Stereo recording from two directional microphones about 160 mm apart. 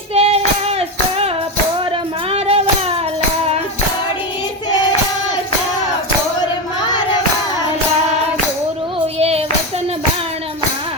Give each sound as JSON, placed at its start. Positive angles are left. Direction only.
{"t": 0.1, "sound": "child singing", "side_deg": -40}
{"t": 2.3, "sound": "child singing", "side_deg": -40}
{"t": 9.1, "sound": "child singing", "side_deg": -40}